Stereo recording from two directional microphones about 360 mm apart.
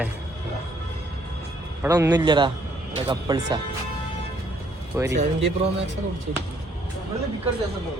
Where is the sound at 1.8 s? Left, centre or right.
Centre.